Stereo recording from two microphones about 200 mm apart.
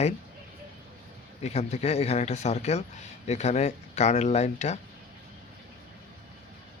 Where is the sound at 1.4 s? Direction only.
35° left (ahead or behind).